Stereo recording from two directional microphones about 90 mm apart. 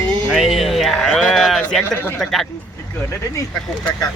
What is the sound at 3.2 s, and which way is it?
Speech, 35° left (ahead or behind).